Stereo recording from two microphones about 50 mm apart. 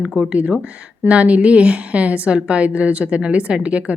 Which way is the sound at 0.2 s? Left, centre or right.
Right.